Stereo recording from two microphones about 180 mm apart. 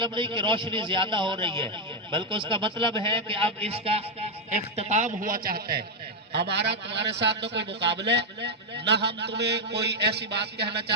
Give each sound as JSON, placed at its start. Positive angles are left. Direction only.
{"t": 0.0, "sound": "a man's voice", "side_deg": -25}
{"t": 6.3, "sound": "a man's voice", "side_deg": -70}